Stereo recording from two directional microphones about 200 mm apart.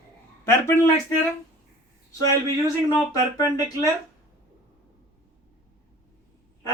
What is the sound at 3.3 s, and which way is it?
Speech, 15° left (ahead or behind).